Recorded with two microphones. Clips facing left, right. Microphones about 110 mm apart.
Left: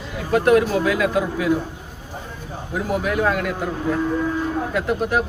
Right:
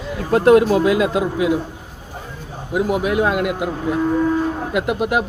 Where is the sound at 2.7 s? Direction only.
20° right (ahead or behind).